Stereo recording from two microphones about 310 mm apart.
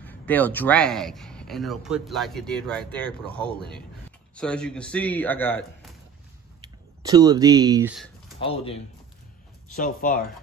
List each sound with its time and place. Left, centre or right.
0.0 s speech: centre
6.6 s speech: centre
8.4 s speech: centre